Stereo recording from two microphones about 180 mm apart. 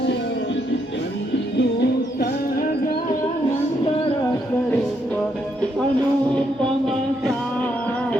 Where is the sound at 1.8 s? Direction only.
60° left (ahead or behind).